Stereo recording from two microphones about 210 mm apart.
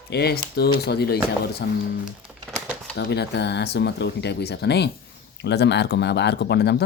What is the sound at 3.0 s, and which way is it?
Speech, 55° left (ahead or behind).